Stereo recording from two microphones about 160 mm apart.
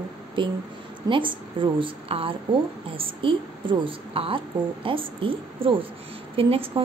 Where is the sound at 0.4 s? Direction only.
30° right (ahead or behind).